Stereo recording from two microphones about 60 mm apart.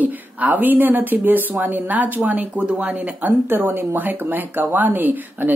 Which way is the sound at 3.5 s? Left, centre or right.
Right.